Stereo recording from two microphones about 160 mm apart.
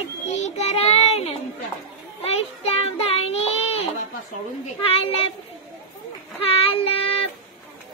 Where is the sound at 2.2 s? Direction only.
40° left (ahead or behind).